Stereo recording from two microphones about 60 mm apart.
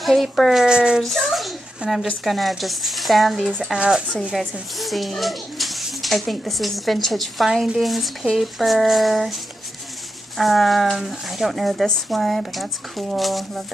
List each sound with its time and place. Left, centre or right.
0.0 s a child's voice: centre
0.7 s speech: centre
1.0 s a child's voice: centre
1.8 s speech: centre
2.2 s a child's voice: centre
3.7 s speech: centre
4.4 s a child's voice: centre
10.3 s a child's voice: centre